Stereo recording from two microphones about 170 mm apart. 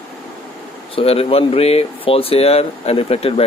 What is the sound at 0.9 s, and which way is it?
Speech, 35° left (ahead or behind).